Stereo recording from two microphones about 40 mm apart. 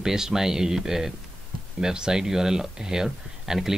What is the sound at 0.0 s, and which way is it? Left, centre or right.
Speech, centre.